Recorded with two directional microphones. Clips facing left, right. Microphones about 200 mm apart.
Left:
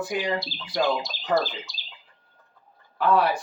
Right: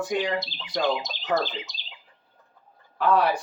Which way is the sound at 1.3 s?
20° right (ahead or behind).